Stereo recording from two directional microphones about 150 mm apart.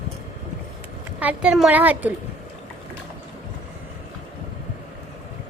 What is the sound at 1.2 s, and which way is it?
Speech, 5° right (ahead or behind).